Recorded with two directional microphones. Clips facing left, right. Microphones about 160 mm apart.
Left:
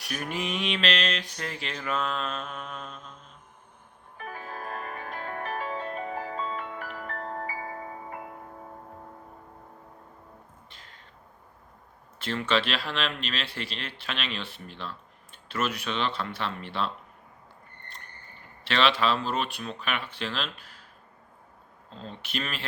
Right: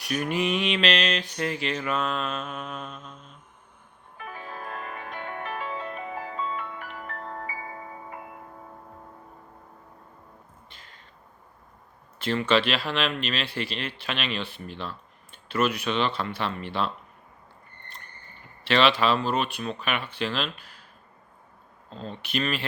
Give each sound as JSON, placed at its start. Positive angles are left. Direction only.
{"t": 0.0, "sound": "mantra", "side_deg": 0}
{"t": 4.2, "sound": "music", "side_deg": 40}
{"t": 12.2, "sound": "mantra", "side_deg": 0}
{"t": 18.6, "sound": "mantra", "side_deg": 0}
{"t": 22.2, "sound": "mantra", "side_deg": 0}